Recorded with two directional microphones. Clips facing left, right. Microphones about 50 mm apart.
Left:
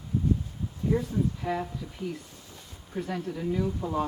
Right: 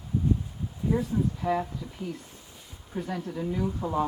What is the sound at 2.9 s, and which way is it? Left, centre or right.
Speech, centre.